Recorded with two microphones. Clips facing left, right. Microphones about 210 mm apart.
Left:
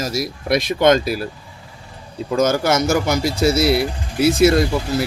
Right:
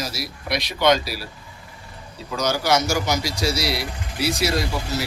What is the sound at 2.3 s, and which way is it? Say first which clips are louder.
Speech: left 5 dB; 50° left (ahead or behind).